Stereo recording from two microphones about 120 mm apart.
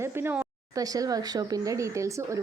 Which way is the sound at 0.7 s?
30° right (ahead or behind).